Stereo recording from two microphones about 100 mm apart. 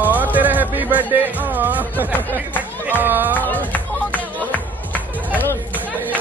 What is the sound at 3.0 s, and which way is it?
Chatter, 20° right (ahead or behind).